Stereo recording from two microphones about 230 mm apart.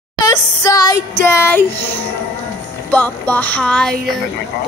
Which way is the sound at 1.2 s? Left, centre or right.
Centre.